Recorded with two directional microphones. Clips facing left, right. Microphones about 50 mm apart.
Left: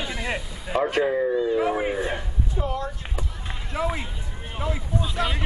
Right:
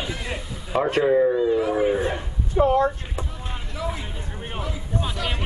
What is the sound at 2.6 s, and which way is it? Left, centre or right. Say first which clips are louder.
Speech: right 11 dB; right.